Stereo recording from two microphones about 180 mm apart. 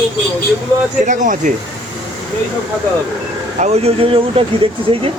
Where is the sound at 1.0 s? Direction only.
45° right (ahead or behind).